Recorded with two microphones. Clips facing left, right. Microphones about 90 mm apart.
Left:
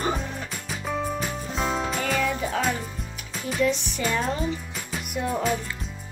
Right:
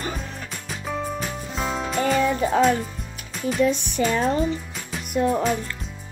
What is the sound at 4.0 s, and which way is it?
Speech, 50° right (ahead or behind).